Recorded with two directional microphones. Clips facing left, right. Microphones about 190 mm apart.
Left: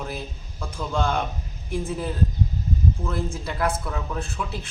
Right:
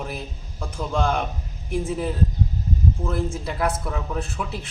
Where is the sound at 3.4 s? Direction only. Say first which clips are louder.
Right 1 dB; 5° right (ahead or behind).